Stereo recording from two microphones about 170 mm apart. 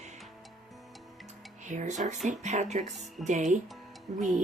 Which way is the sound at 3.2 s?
45° right (ahead or behind).